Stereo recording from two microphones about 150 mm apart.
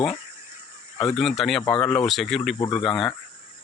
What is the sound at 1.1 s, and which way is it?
Speech, centre (ahead or behind).